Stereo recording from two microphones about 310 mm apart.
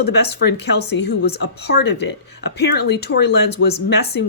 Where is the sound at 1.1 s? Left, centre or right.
Left.